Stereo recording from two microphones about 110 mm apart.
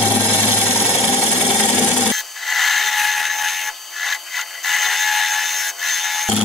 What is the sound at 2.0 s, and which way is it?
Wood, centre (ahead or behind).